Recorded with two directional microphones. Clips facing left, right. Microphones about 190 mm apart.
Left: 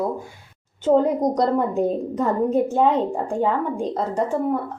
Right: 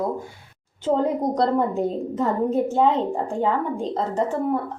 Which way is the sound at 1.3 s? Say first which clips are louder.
Left 1 dB; 15° left (ahead or behind).